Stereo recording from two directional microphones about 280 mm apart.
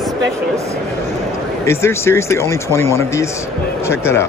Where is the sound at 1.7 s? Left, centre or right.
Centre.